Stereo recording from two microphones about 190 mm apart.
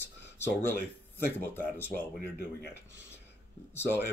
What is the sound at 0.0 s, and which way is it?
Speech, 10° left (ahead or behind).